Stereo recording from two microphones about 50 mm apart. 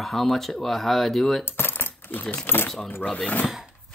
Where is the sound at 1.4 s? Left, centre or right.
Left.